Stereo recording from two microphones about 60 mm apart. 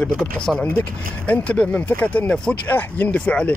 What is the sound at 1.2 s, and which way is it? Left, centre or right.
Speech, left.